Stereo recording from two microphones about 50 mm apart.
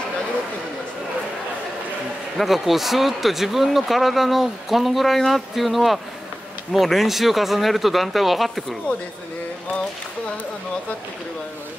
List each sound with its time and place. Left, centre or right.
2.3 s speech: centre